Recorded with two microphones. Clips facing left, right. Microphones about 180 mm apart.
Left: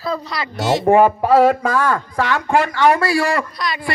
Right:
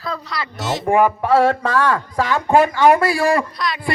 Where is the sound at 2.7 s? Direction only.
15° right (ahead or behind).